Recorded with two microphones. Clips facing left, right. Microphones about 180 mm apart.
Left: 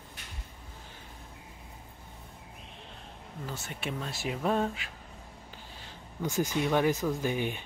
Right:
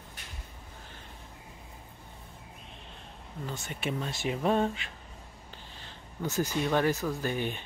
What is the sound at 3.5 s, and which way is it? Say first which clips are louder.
Speech: right 3 dB; centre (ahead or behind).